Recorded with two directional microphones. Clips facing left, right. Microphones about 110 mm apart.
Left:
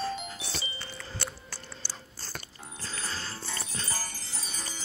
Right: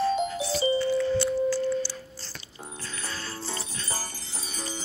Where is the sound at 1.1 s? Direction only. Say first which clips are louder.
Right 18 dB; 55° left (ahead or behind).